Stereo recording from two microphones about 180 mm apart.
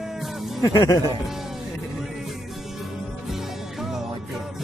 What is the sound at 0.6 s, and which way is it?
Speech, 20° left (ahead or behind).